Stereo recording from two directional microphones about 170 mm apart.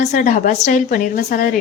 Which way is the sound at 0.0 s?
45° left (ahead or behind).